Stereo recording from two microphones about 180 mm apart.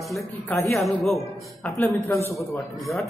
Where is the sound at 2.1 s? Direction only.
15° left (ahead or behind).